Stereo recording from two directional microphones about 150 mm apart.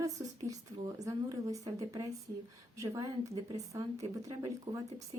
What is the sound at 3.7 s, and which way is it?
A woman's voice, 20° right (ahead or behind).